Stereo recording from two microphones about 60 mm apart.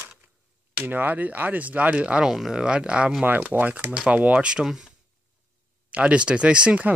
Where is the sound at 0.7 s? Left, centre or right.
Right.